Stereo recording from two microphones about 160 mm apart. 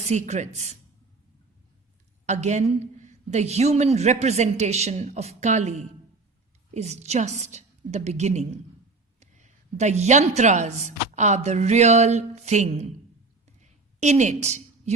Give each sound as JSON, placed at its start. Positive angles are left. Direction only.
{"t": 0.0, "sound": "a woman's voice", "side_deg": -45}
{"t": 2.2, "sound": "a woman's voice", "side_deg": -45}
{"t": 13.6, "sound": "a sound", "side_deg": -45}